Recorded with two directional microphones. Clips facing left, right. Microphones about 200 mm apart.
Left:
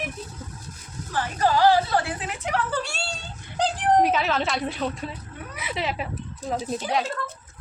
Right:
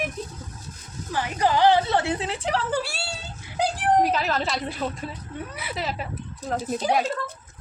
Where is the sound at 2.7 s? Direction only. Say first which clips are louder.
Right 2 dB; 5° right (ahead or behind).